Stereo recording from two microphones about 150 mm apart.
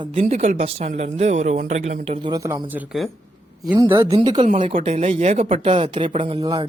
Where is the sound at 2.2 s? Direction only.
25° right (ahead or behind).